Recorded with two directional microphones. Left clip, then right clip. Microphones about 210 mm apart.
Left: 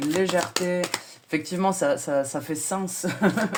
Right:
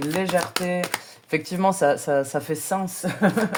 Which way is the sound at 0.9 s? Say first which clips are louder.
Right 3 dB; 35° right (ahead or behind).